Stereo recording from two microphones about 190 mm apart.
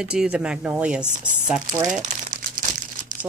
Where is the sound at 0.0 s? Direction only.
5° right (ahead or behind).